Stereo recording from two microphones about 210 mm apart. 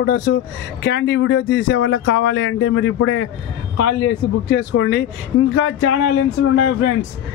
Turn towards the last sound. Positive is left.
turn(degrees=70)  # may be behind; listen again after turning